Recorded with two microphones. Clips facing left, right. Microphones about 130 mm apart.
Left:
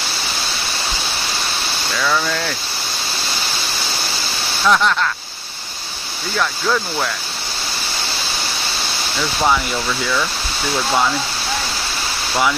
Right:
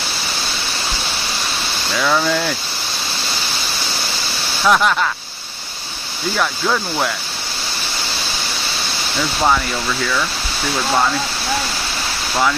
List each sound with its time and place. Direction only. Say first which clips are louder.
2.0 s speech: right 3 dB; 10° right (ahead or behind)
4.6 s speech: right 1 dB; 10° right (ahead or behind)
6.3 s speech: even; 10° right (ahead or behind)